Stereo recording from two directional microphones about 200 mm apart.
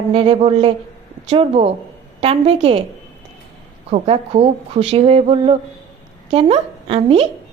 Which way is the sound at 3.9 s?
30° right (ahead or behind).